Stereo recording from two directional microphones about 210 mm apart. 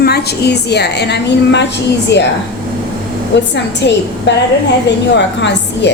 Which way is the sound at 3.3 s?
55° left (ahead or behind).